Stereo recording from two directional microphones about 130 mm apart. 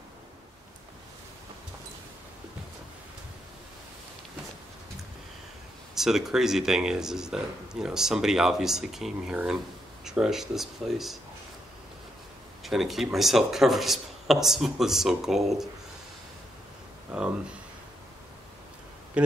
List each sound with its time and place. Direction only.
5.9 s speech: 5° right (ahead or behind)
12.6 s speech: centre (ahead or behind)
19.2 s speech: 10° right (ahead or behind)